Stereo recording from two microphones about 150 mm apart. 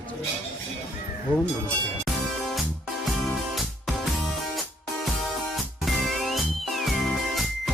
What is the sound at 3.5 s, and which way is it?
Music, centre (ahead or behind).